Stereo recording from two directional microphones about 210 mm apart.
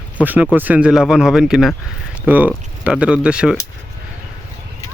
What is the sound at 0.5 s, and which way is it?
Speech, 10° right (ahead or behind).